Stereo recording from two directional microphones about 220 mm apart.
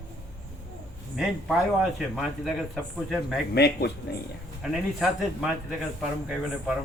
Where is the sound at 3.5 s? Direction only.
45° left (ahead or behind).